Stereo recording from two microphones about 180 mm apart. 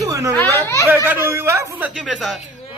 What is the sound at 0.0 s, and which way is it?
Children playing, 15° right (ahead or behind).